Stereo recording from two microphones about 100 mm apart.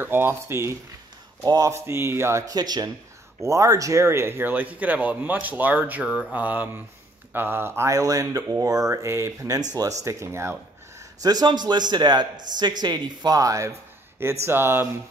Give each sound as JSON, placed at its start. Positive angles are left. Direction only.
{"t": 0.0, "sound": "speech", "side_deg": -20}
{"t": 1.4, "sound": "speech", "side_deg": -35}
{"t": 1.9, "sound": "speech", "side_deg": -25}
{"t": 2.4, "sound": "speech", "side_deg": -40}
{"t": 11.1, "sound": "a man's voice", "side_deg": -40}